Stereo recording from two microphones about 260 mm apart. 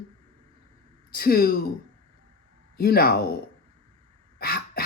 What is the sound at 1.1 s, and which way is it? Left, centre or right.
Speech, left.